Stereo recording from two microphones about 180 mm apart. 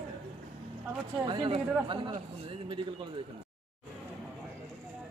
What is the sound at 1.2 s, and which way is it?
Speech, 25° right (ahead or behind).